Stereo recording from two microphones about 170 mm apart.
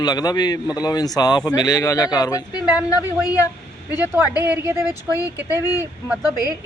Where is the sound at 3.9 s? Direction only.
10° right (ahead or behind).